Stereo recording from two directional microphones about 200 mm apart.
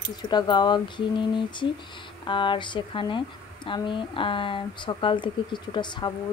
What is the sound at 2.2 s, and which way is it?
Speech, 25° left (ahead or behind).